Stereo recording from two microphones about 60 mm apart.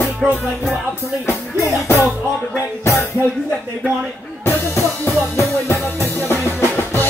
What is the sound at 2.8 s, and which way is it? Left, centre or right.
Music, left.